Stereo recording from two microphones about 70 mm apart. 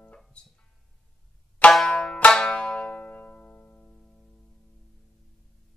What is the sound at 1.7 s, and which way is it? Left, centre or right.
Banjo, centre.